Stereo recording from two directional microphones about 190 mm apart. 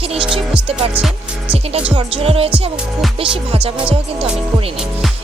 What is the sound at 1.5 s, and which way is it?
Music, 30° right (ahead or behind).